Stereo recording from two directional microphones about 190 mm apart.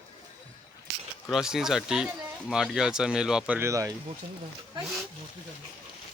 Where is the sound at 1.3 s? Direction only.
Centre (ahead or behind).